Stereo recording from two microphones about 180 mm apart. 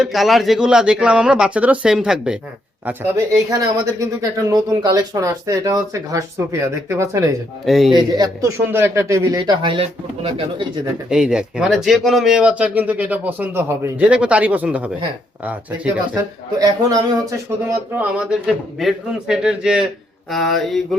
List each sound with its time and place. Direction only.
0.0 s a man's voice: centre (ahead or behind)
2.8 s speech: 15° right (ahead or behind)
7.6 s a man's voice: centre (ahead or behind)
7.9 s speech: 20° right (ahead or behind)
11.1 s speech: 5° right (ahead or behind)
16.1 s speech: 20° right (ahead or behind)
17.9 s a man's voice: 5° right (ahead or behind)